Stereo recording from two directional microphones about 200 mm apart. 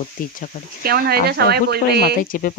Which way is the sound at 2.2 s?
45° left (ahead or behind).